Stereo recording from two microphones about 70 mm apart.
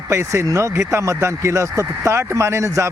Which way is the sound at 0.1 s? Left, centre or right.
Right.